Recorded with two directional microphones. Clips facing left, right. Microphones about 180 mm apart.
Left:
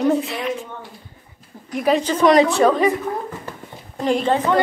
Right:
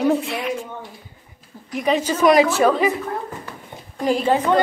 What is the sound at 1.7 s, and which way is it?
A woman's voice, centre (ahead or behind).